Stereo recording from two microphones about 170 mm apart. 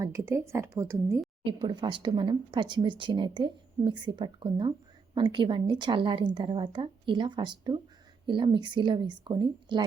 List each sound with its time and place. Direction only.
0.0 s speech: 20° right (ahead or behind)
1.5 s speech: 25° right (ahead or behind)